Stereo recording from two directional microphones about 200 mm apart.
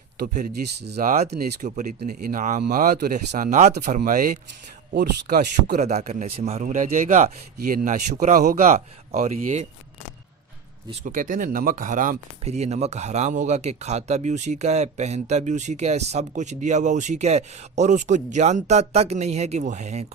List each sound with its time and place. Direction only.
0.3 s speech: 50° right (ahead or behind)
4.9 s speech: 55° right (ahead or behind)
5.8 s speech: 35° right (ahead or behind)
11.0 s speech: 40° right (ahead or behind)